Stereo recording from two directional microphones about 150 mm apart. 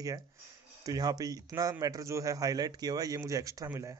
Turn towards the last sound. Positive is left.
turn(degrees=-20)  # may be behind; listen again after turning